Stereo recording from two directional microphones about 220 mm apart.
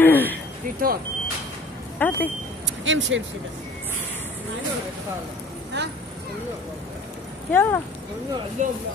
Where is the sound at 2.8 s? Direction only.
60° right (ahead or behind).